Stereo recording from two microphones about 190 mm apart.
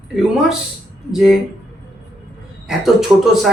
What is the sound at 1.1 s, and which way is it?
Speech, centre (ahead or behind).